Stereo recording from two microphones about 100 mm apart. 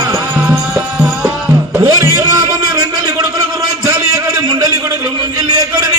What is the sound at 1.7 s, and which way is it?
Music, 30° right (ahead or behind).